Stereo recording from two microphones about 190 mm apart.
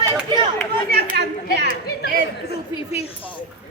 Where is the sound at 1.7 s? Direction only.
55° left (ahead or behind).